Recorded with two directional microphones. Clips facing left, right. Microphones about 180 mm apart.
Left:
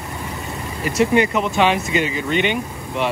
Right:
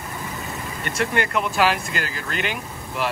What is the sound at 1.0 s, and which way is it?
Speech, centre (ahead or behind).